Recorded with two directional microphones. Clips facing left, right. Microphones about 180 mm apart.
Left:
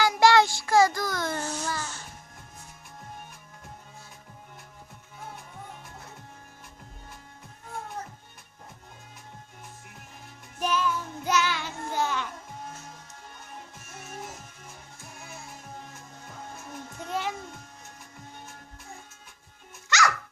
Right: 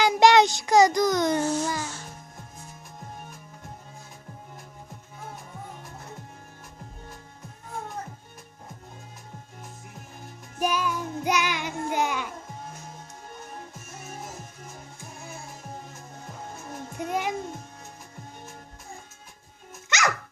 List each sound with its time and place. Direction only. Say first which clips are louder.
0.0 s child singing: right 2 dB; 20° right (ahead or behind)
10.6 s child singing: right 1 dB; 10° right (ahead or behind)
17.0 s music: right 3 dB; 15° right (ahead or behind)
19.9 s music: left 2 dB; 20° right (ahead or behind)